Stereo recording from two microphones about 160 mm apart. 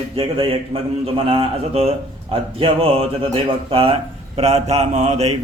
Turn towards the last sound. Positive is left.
turn(degrees=-40)  # may be behind; listen again after turning